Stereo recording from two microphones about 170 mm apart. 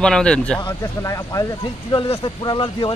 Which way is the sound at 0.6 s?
20° left (ahead or behind).